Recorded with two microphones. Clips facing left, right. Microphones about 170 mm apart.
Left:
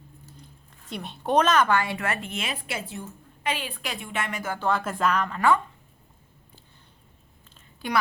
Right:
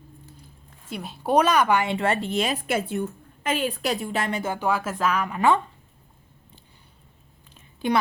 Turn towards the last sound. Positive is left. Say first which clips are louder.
# right 5 dB
turn(degrees=-20)  # may be behind; listen again after turning